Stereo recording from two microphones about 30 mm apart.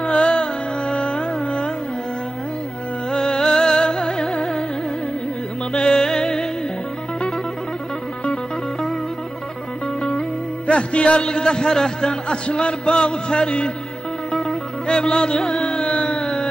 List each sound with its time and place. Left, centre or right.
0.0 s music: left
3.1 s music: left
5.7 s music: left
10.7 s music: left
11.2 s speech: left
14.3 s music: centre
14.9 s carnatic music: left
16.1 s a sound: left